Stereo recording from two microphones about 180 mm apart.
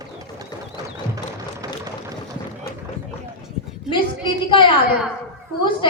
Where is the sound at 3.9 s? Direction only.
25° left (ahead or behind).